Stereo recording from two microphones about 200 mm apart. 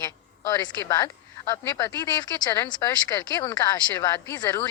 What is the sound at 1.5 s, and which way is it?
Speech, 15° left (ahead or behind).